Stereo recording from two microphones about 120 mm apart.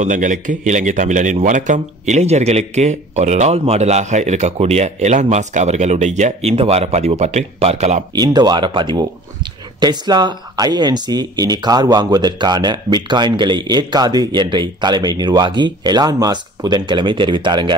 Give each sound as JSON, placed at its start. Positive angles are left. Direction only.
{"t": 0.0, "sound": "speech", "side_deg": -90}
{"t": 8.1, "sound": "speech", "side_deg": -35}